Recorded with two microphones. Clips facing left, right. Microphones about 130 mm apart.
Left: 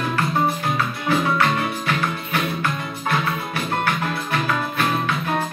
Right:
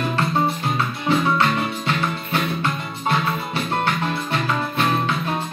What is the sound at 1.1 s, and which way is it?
Music, 25° right (ahead or behind).